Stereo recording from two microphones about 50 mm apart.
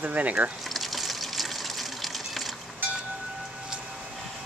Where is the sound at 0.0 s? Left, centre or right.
Right.